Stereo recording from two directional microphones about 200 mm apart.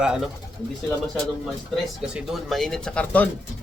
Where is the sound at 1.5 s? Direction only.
Centre (ahead or behind).